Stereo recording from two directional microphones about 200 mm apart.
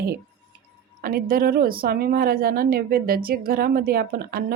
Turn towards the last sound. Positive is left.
turn(degrees=-50)  # may be behind; listen again after turning